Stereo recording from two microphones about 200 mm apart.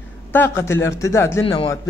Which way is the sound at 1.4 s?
25° left (ahead or behind).